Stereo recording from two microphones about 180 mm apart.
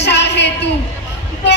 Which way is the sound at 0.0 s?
70° left (ahead or behind).